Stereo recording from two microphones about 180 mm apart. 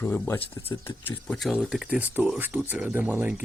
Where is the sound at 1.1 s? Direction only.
Centre (ahead or behind).